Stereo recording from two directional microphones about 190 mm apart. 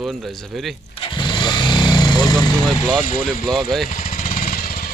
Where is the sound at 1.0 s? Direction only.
25° left (ahead or behind).